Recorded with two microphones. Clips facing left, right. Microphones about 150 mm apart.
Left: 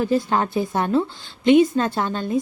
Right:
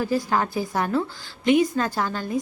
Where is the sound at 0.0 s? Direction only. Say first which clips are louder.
Left 3 dB; 25° left (ahead or behind).